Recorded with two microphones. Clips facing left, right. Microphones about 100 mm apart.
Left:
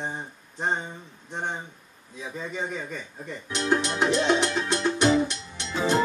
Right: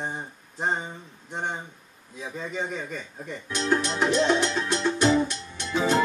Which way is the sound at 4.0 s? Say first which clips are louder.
Right 1 dB; 15° left (ahead or behind).